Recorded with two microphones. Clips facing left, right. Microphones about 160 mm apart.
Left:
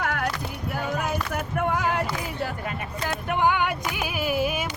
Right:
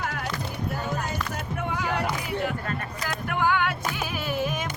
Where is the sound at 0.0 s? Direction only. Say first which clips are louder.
Left 5 dB; 60° left (ahead or behind).